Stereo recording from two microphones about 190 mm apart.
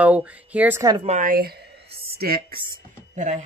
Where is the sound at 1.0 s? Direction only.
40° right (ahead or behind).